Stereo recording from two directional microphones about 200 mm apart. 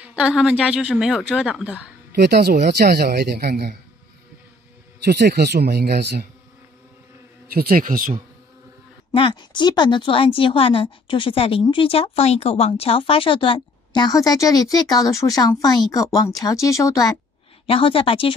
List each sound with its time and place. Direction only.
0.4 s speech: 5° right (ahead or behind)
2.1 s speech: 55° right (ahead or behind)
5.0 s speech: 55° right (ahead or behind)
7.5 s speech: 45° right (ahead or behind)
9.1 s a woman's voice: 25° left (ahead or behind)
17.6 s a woman's voice: 25° left (ahead or behind)